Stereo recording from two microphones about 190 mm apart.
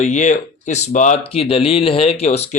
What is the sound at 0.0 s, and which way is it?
Speech, 40° left (ahead or behind).